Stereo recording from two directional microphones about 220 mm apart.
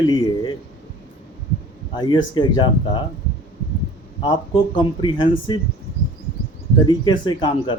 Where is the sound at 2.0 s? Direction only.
20° left (ahead or behind).